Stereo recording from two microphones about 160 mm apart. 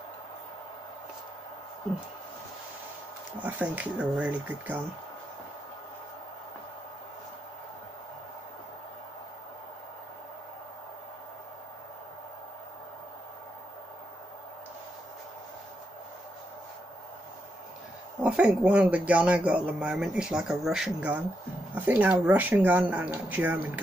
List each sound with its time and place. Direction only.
3.3 s speech: 10° right (ahead or behind)
18.2 s speech: 5° right (ahead or behind)